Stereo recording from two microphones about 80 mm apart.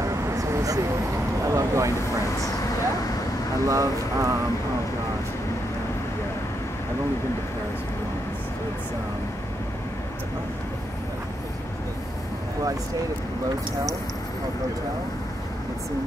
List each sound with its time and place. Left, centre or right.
0.0 s vehicle: right
3.6 s speech: right